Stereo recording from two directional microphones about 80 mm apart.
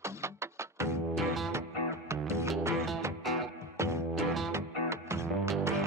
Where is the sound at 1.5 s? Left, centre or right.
Right.